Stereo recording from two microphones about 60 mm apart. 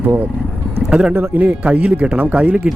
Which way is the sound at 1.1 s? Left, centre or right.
Right.